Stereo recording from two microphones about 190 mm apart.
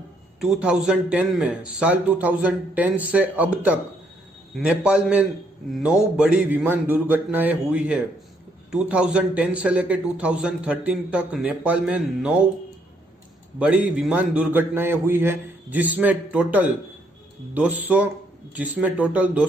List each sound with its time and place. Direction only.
0.4 s speech: 5° right (ahead or behind)
13.6 s speech: 5° right (ahead or behind)